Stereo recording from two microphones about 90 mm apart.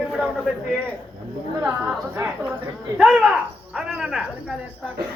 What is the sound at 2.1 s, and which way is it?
Speech, 25° right (ahead or behind).